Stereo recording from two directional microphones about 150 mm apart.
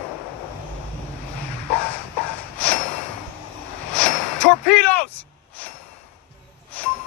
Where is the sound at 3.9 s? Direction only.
5° left (ahead or behind).